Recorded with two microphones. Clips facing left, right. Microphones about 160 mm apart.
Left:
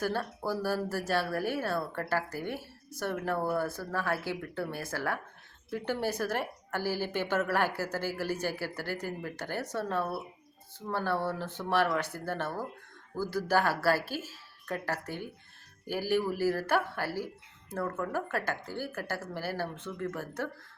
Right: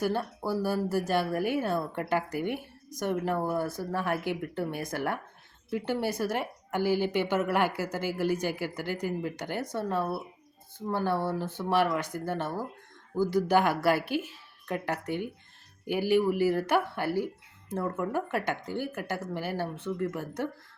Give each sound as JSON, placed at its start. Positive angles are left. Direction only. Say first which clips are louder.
{"t": 0.0, "sound": "a woman's voice", "louder": "right 3 dB", "side_deg": -15}